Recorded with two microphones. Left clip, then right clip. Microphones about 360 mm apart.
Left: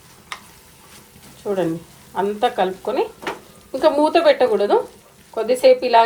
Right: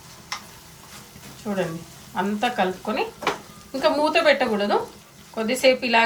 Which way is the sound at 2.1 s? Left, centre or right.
Centre.